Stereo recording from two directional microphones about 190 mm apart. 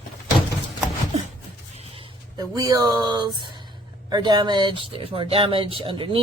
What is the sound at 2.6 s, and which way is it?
Speech, 20° right (ahead or behind).